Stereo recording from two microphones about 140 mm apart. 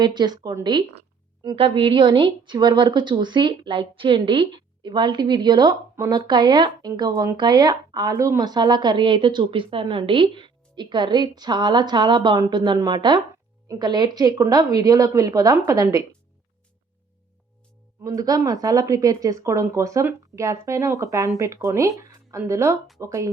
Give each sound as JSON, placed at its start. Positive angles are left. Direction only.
{"t": 0.0, "sound": "speech", "side_deg": -30}
{"t": 7.1, "sound": "speech", "side_deg": -20}
{"t": 7.3, "sound": "speech", "side_deg": -30}
{"t": 18.0, "sound": "speech", "side_deg": -25}